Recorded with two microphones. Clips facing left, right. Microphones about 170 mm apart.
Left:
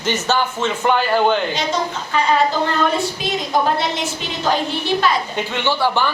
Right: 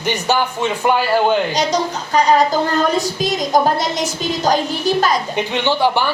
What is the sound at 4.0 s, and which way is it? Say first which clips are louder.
Child singing: right 4 dB; 40° right (ahead or behind).